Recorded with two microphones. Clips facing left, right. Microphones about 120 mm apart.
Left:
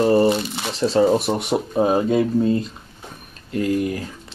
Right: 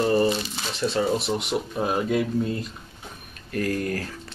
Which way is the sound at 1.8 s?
30° left (ahead or behind).